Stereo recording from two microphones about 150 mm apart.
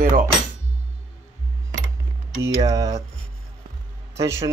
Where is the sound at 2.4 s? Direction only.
25° right (ahead or behind).